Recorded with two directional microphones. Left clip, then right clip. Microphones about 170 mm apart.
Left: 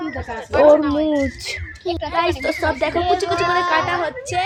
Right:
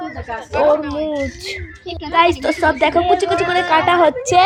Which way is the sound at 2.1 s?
20° right (ahead or behind).